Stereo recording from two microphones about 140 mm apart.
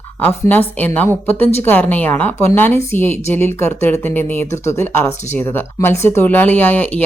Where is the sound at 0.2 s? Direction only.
15° left (ahead or behind).